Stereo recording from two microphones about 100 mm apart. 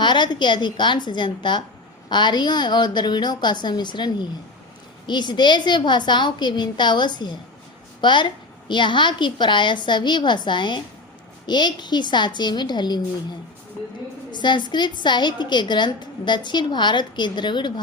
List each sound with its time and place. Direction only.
0.0 s a woman's voice: 50° left (ahead or behind)
14.3 s a woman's voice: 50° left (ahead or behind)